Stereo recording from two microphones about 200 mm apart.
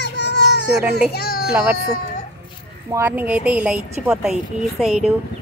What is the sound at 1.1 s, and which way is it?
Speech, 50° left (ahead or behind).